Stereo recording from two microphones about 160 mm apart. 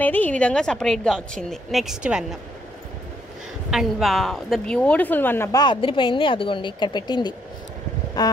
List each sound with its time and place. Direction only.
0.0 s a woman's voice: 10° left (ahead or behind)
3.7 s a woman's voice: centre (ahead or behind); by 7.3 s 30° left (ahead or behind)
8.2 s a sound: 25° left (ahead or behind)